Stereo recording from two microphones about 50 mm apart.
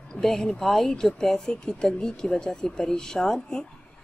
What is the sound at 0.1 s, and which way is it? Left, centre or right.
A woman's voice, centre.